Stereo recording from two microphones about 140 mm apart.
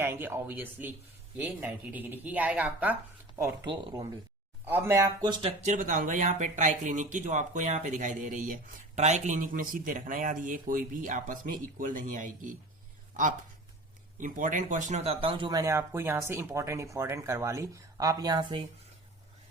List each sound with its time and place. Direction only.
0.0 s speech: 15° right (ahead or behind)
3.3 s speech: 20° right (ahead or behind)
5.6 s speech: 65° right (ahead or behind); by 18.6 s 30° right (ahead or behind)